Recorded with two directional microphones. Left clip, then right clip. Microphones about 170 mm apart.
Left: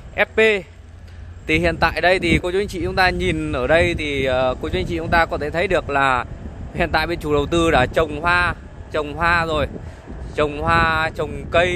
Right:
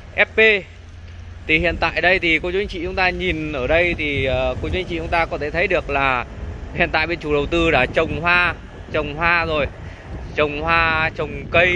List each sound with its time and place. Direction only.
0.1 s speech: 20° left (ahead or behind)